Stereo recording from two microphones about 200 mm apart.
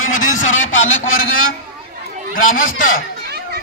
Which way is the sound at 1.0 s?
90° left.